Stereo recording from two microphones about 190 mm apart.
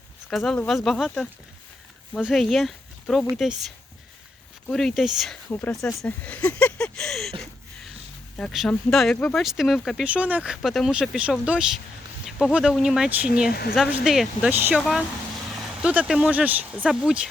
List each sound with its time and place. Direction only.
0.3 s speech: 5° left (ahead or behind)
4.7 s speech: centre (ahead or behind)
13.5 s speech: 55° left (ahead or behind)
14.0 s speech: centre (ahead or behind)